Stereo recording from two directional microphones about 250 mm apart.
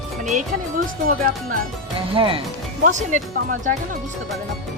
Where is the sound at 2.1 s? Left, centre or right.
Right.